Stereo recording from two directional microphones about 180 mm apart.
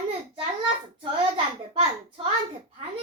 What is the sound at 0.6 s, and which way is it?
A child's voice, 30° right (ahead or behind).